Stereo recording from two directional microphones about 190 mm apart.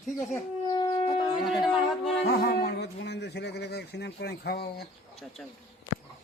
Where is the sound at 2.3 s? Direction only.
55° left (ahead or behind).